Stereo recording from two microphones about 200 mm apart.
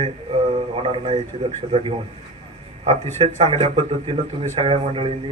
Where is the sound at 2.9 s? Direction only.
30° right (ahead or behind).